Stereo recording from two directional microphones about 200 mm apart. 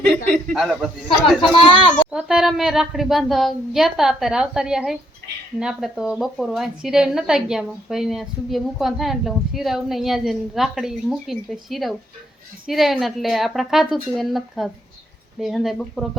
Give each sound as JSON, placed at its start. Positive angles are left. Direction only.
{"t": 0.5, "sound": "a woman's voice", "side_deg": 0}
{"t": 1.5, "sound": "speech", "side_deg": 25}
{"t": 2.0, "sound": "a woman's voice", "side_deg": -5}